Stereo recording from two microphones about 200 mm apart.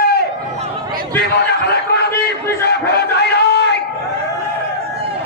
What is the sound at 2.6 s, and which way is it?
Crowd, 55° left (ahead or behind).